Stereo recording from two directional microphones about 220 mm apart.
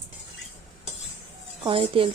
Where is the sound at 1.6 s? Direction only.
25° right (ahead or behind).